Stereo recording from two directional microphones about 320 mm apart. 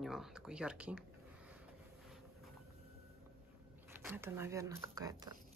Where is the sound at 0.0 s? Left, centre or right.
Centre.